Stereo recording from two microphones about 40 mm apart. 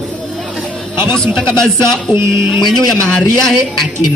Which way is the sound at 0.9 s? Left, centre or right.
Left.